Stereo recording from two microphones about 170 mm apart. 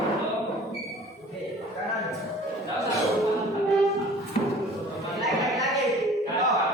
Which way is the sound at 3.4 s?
Centre (ahead or behind).